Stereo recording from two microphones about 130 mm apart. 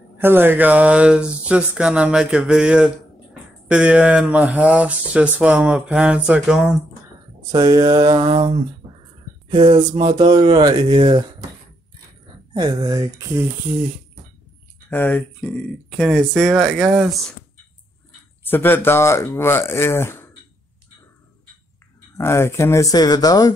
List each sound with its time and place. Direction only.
0.2 s speech: 15° right (ahead or behind)
7.5 s speech: 30° right (ahead or behind)
12.5 s speech: 30° right (ahead or behind)
14.9 s speech: 15° left (ahead or behind); by 17.3 s 5° right (ahead or behind)
18.4 s speech: 15° left (ahead or behind)
22.1 s speech: 20° left (ahead or behind)